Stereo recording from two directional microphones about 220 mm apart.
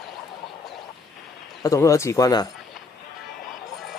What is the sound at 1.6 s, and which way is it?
Speech, 15° left (ahead or behind).